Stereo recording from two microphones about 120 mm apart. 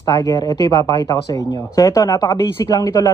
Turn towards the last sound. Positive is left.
turn(degrees=30)  # may be behind; listen again after turning